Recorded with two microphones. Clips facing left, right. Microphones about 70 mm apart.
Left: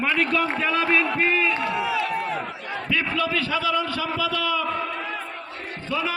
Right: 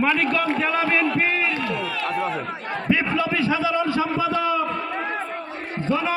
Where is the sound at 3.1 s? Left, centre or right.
Centre.